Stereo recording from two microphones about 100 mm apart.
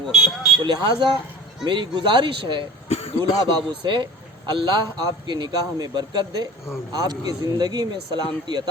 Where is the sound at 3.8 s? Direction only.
50° right (ahead or behind).